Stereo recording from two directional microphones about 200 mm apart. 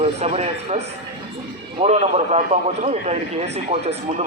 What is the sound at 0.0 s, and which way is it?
A man's voice, 30° right (ahead or behind).